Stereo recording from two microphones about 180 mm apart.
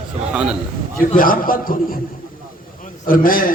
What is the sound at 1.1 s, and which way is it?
Speech, 50° left (ahead or behind).